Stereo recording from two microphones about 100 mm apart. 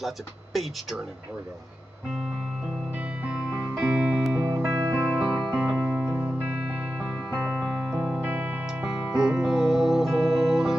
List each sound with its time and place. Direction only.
0.0 s speech: centre (ahead or behind)
3.0 s music: 15° right (ahead or behind)
4.4 s music: 25° right (ahead or behind)
5.2 s music: 5° right (ahead or behind)